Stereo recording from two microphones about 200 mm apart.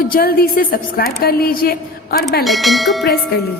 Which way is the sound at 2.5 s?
Centre (ahead or behind).